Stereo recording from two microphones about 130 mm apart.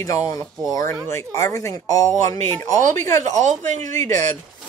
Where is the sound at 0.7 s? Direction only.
25° left (ahead or behind).